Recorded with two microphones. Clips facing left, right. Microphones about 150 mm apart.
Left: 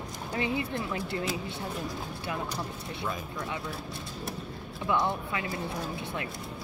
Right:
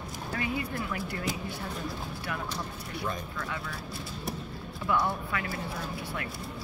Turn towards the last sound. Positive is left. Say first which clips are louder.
# left 1 dB
turn(degrees=20)  # may be behind; listen again after turning